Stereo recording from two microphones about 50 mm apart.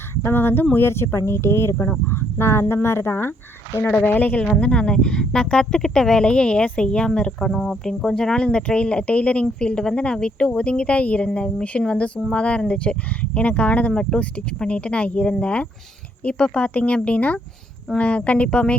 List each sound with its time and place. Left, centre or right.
0.2 s a sound: left
0.9 s speech: left
4.0 s speech: left
4.6 s speech: centre
7.5 s speech: centre
7.9 s speech: centre